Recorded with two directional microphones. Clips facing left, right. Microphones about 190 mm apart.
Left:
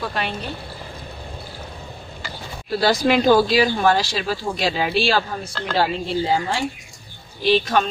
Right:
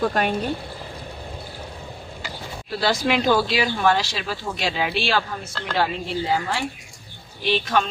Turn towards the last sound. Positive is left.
turn(degrees=40)  # may be behind; listen again after turning